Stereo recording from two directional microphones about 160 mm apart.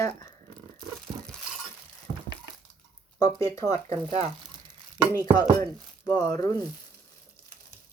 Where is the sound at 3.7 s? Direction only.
40° right (ahead or behind).